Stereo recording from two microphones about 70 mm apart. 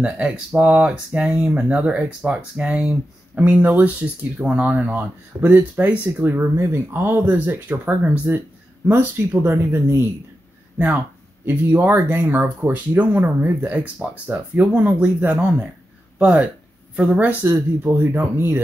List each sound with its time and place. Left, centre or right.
0.6 s speech: right
6.3 s speech: right
8.9 s speech: right
11.4 s speech: right